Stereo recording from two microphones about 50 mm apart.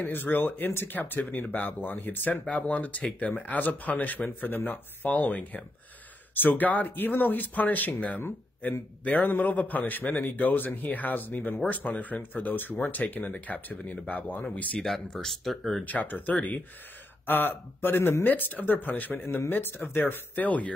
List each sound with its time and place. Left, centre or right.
0.0 s speech: left
14.8 s speech: centre
15.8 s speech: left
17.3 s speech: left
20.4 s speech: left